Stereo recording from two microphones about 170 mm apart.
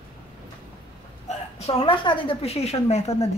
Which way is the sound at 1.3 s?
35° left (ahead or behind).